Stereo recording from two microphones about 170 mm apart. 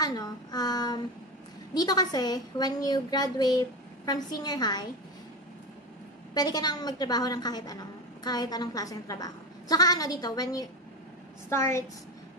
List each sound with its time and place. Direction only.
0.0 s child singing: 25° left (ahead or behind)
1.7 s a woman's voice: 25° left (ahead or behind)
6.3 s a woman's voice: 25° left (ahead or behind)